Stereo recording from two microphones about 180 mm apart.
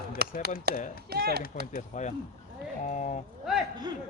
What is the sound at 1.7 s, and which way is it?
A man's voice, 45° left (ahead or behind).